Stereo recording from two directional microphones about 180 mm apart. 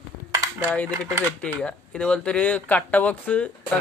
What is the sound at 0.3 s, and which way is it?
Cutlery, 15° right (ahead or behind).